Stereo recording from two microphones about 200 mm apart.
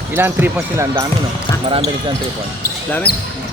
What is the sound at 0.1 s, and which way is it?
Speech, 10° right (ahead or behind).